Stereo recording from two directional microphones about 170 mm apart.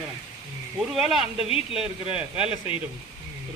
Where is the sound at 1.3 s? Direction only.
35° left (ahead or behind).